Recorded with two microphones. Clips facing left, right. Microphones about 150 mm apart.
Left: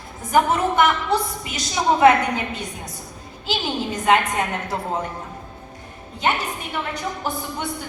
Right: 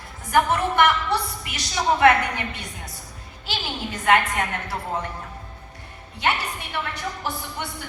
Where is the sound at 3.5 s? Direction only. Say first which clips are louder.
Left 6 dB; 20° left (ahead or behind).